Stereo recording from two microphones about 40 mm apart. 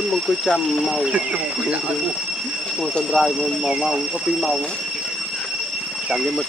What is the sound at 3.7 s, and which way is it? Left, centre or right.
Speech, centre.